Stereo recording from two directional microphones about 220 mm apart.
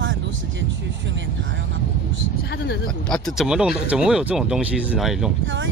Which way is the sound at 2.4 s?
50° left (ahead or behind).